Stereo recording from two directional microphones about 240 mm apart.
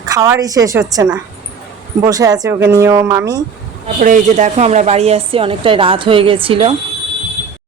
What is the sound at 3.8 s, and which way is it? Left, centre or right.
A woman's voice, right.